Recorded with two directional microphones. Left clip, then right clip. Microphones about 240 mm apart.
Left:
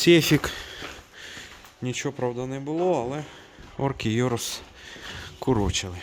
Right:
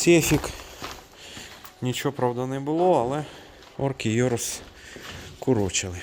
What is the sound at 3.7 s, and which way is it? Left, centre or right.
Speech, centre.